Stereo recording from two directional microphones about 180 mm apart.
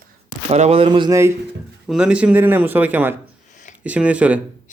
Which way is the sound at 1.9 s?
5° right (ahead or behind).